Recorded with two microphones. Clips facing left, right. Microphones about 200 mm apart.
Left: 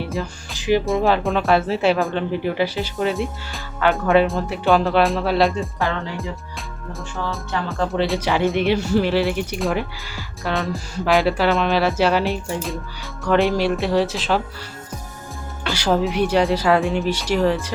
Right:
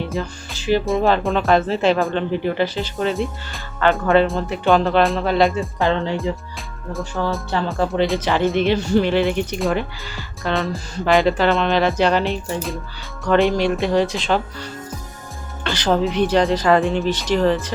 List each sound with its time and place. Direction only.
0.0 s music: centre (ahead or behind)
0.5 s music: 15° left (ahead or behind)
0.9 s speech: centre (ahead or behind)
5.8 s speech: 25° right (ahead or behind)
7.2 s speech: 45° right (ahead or behind)
7.7 s speech: centre (ahead or behind)
8.2 s speech: 10° left (ahead or behind)
15.6 s speech: 10° left (ahead or behind)